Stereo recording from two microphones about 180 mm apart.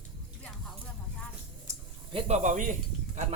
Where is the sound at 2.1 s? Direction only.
40° right (ahead or behind).